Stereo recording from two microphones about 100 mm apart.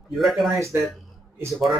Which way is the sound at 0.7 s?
25° right (ahead or behind).